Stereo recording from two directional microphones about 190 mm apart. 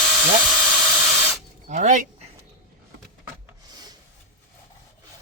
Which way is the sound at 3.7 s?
20° right (ahead or behind).